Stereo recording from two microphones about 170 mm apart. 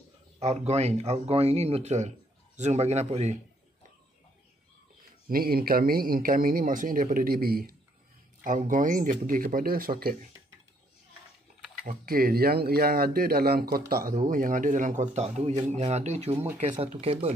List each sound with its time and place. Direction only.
0.4 s speech: 40° right (ahead or behind)
5.3 s speech: 60° right (ahead or behind)
11.8 s speech: 60° right (ahead or behind); by 17.3 s 35° right (ahead or behind)